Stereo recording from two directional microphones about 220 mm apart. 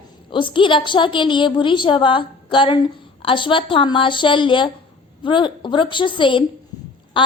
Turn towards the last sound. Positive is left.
turn(degrees=20)  # may be behind; listen again after turning